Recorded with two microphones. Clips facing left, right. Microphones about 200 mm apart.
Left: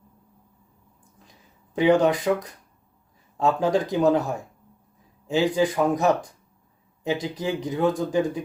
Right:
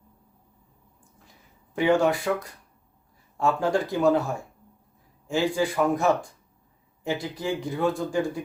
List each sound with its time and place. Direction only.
1.3 s speech: 20° left (ahead or behind)